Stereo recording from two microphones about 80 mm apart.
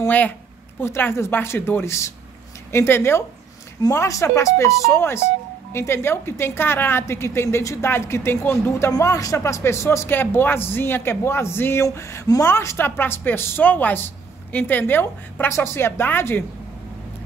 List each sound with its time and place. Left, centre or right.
0.0 s a woman's voice: centre
9.0 s a woman's voice: left